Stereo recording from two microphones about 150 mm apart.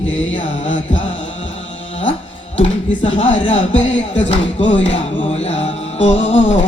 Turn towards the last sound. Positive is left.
turn(degrees=45)  # may be behind; listen again after turning